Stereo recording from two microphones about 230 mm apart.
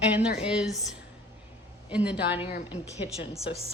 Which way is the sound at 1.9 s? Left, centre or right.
Centre.